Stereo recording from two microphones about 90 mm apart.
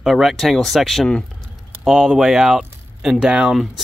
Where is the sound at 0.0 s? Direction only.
Centre (ahead or behind).